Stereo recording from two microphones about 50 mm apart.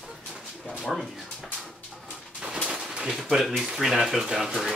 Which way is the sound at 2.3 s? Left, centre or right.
Centre.